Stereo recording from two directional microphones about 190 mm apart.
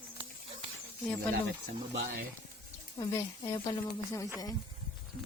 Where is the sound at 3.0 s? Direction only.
15° left (ahead or behind).